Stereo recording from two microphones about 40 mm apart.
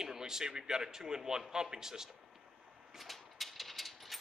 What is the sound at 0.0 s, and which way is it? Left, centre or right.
Speech, centre.